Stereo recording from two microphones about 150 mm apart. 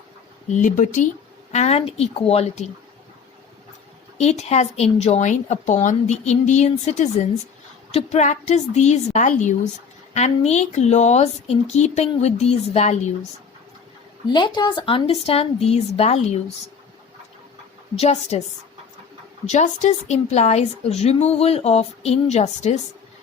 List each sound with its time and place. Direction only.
0.5 s speech: 60° left (ahead or behind)
1.5 s a woman's voice: 45° left (ahead or behind)
4.2 s a woman's voice: 45° left (ahead or behind)
14.3 s a woman's voice: 30° left (ahead or behind); by 16.4 s 45° left (ahead or behind)
17.9 s a woman's voice: 45° left (ahead or behind)
19.5 s a woman's voice: 50° left (ahead or behind)